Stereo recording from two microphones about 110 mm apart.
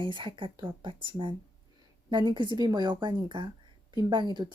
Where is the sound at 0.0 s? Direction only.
50° right (ahead or behind).